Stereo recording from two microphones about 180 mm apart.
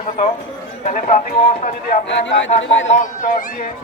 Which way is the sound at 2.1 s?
90° left.